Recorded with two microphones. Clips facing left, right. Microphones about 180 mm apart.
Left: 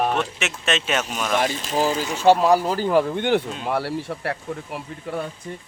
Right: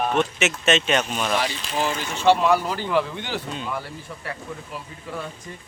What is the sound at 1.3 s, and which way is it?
A man's voice, 45° left (ahead or behind).